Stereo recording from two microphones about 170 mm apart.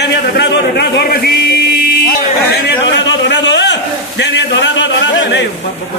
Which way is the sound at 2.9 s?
90° left.